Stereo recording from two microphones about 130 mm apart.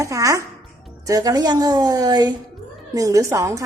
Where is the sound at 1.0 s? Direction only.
30° right (ahead or behind).